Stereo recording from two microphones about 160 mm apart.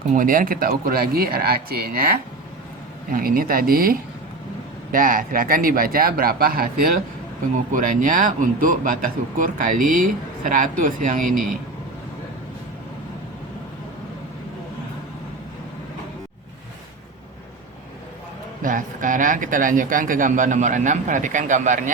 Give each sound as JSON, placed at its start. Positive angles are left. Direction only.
{"t": 0.1, "sound": "speech", "side_deg": -60}
{"t": 7.7, "sound": "speech", "side_deg": -55}
{"t": 18.6, "sound": "speech", "side_deg": -55}